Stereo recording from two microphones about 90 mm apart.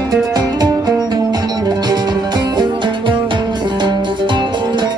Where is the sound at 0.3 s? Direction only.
50° right (ahead or behind).